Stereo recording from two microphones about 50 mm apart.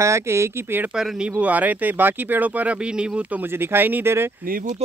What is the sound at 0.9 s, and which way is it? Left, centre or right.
Speech, centre.